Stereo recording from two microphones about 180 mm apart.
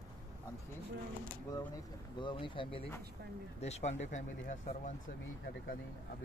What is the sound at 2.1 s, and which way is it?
Speech, 25° left (ahead or behind).